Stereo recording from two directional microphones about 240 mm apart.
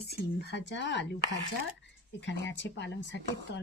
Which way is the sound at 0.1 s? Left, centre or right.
Left.